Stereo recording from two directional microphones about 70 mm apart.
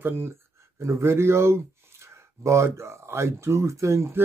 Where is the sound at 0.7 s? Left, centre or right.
Right.